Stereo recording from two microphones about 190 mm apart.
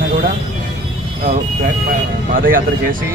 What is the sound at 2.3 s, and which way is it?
Speech, 50° right (ahead or behind).